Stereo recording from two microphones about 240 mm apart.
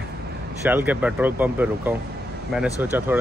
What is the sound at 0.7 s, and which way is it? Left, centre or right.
Speech, centre.